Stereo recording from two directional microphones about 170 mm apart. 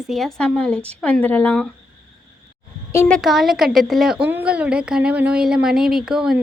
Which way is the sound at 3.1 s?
Centre (ahead or behind).